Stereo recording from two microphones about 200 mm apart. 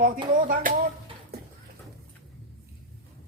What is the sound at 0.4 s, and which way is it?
Speech, 45° right (ahead or behind).